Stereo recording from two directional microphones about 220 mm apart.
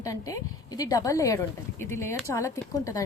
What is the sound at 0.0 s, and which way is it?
Speech, 15° left (ahead or behind).